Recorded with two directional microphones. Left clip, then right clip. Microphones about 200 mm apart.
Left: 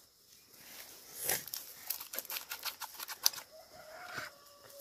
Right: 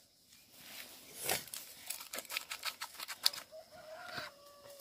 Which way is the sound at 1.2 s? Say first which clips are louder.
Right 1 dB; 45° right (ahead or behind).